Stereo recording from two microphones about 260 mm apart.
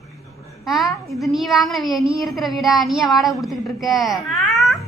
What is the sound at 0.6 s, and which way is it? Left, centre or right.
A child's voice, centre.